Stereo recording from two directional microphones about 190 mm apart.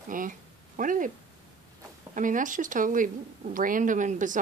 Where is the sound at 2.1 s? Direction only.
45° right (ahead or behind).